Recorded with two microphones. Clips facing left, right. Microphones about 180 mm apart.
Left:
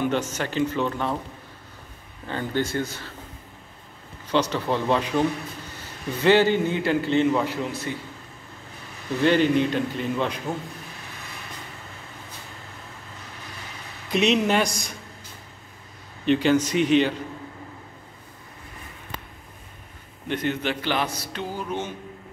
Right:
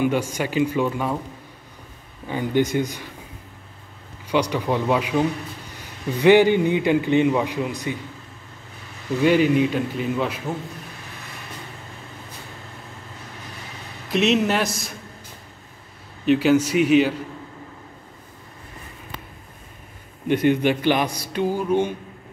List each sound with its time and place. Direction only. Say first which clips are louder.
0.0 s a man's voice: right 3 dB; 10° right (ahead or behind)
2.2 s a man's voice: right 5 dB; 10° right (ahead or behind)
4.3 s a man's voice: right 2 dB; 10° right (ahead or behind)
6.2 s a man's voice: right 4 dB; 15° right (ahead or behind)
9.2 s a man's voice: right 2 dB; 5° right (ahead or behind)
14.1 s a man's voice: right 1 dB; centre (ahead or behind)
16.3 s a man's voice: right 3 dB; 5° right (ahead or behind)
20.2 s a man's voice: right 8 dB; 10° right (ahead or behind)